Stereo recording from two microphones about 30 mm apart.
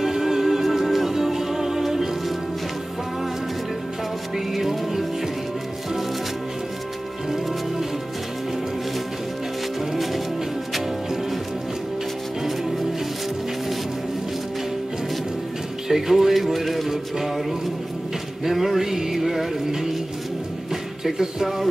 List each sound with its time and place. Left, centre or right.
0.0 s music: centre
4.6 s music: centre
15.9 s music: centre
21.0 s music: centre